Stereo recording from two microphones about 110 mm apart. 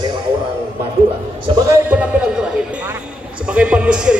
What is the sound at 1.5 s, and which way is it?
Speech, 30° right (ahead or behind).